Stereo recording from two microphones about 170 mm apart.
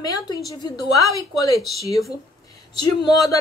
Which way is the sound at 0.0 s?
25° left (ahead or behind).